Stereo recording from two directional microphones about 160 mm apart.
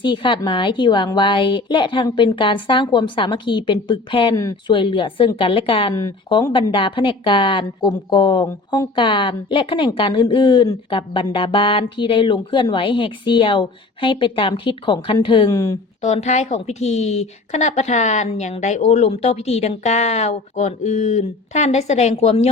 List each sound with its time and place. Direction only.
0.0 s a woman's voice: 30° left (ahead or behind)
16.0 s a woman's voice: 45° left (ahead or behind)